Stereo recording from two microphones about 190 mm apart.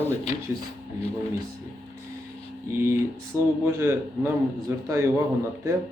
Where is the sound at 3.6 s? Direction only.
15° right (ahead or behind).